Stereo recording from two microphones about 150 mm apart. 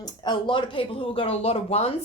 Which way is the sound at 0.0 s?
30° left (ahead or behind).